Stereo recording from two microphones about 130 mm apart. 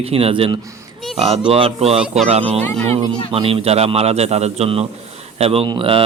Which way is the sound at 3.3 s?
45° right (ahead or behind).